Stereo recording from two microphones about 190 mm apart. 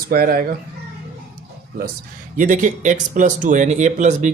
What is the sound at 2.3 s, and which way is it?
Speech, 40° right (ahead or behind).